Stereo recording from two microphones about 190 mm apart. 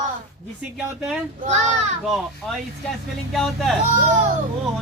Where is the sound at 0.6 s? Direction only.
5° right (ahead or behind).